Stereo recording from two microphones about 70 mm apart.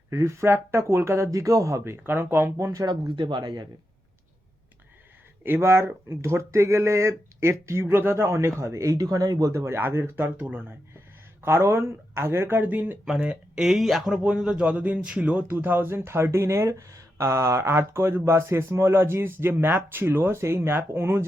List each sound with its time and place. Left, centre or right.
0.1 s speech: right
1.8 s speech: right
3.4 s speech: right
5.4 s speech: right
9.5 s speech: right
9.7 s speech: right
10.2 s speech: right
11.4 s speech: right
12.6 s speech: right
13.6 s a man's voice: centre; by 21.2 s right